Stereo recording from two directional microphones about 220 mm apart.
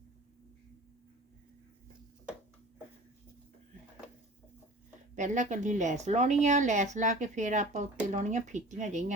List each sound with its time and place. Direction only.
5.1 s speech: 35° right (ahead or behind)